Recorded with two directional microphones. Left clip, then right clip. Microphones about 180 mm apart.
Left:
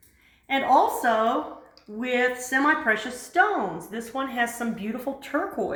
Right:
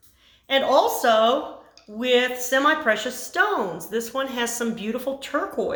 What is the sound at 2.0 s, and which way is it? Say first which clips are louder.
Speech: right 4 dB; 25° right (ahead or behind).